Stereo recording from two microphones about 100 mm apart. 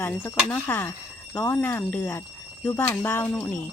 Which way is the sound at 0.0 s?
20° left (ahead or behind).